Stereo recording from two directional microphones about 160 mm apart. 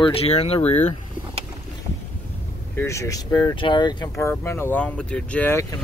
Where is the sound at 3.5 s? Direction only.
30° left (ahead or behind).